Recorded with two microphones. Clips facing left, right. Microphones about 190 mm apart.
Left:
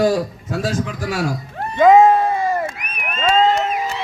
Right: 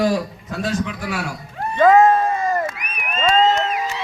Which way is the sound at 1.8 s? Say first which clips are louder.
Left 2 dB; 15° left (ahead or behind).